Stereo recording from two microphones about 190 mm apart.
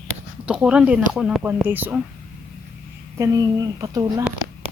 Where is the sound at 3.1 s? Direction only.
15° right (ahead or behind).